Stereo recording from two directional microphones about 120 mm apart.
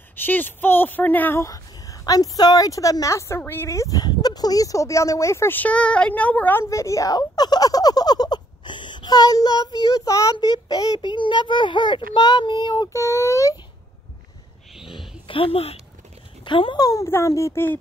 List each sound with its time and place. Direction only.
0.1 s speech: 15° left (ahead or behind)
6.6 s a child's voice: 25° left (ahead or behind)
12.9 s speech: 25° left (ahead or behind)
14.8 s a sound: centre (ahead or behind)
15.2 s speech: 50° left (ahead or behind)
16.8 s speech: 25° left (ahead or behind)